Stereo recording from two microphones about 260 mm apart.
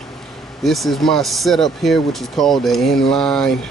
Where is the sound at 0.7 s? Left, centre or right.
Centre.